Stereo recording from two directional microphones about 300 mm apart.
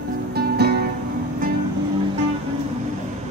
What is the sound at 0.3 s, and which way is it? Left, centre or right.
Music, right.